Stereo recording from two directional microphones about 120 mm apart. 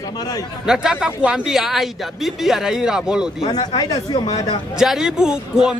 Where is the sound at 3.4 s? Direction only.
35° left (ahead or behind).